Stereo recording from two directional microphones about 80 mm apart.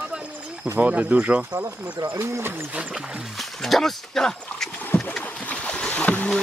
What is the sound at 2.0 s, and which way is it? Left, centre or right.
Speech, right.